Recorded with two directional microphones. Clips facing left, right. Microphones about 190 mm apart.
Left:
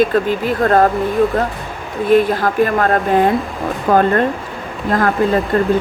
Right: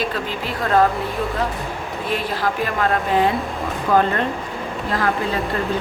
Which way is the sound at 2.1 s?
50° left (ahead or behind).